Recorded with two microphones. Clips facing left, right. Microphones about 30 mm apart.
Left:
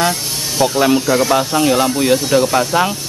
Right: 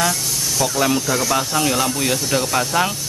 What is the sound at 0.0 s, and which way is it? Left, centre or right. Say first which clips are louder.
Vehicle: left 3 dB; left.